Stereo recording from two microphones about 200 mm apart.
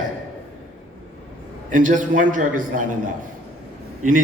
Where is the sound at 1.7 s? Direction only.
40° right (ahead or behind).